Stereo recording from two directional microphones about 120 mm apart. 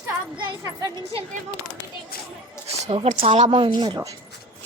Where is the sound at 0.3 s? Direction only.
40° right (ahead or behind).